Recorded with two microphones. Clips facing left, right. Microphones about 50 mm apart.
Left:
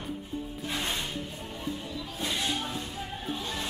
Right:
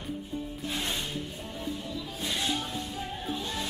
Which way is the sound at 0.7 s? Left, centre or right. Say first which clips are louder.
Left 1 dB; centre.